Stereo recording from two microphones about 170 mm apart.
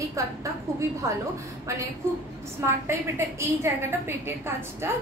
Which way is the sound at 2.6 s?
15° right (ahead or behind).